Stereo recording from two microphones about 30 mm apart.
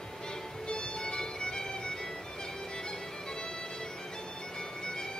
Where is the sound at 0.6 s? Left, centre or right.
Left.